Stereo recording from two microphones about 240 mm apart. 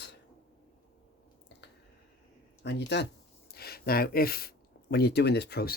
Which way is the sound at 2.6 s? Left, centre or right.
Left.